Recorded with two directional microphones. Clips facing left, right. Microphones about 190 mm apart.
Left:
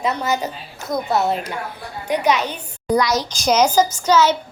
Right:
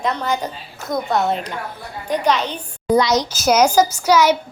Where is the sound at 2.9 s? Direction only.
20° right (ahead or behind).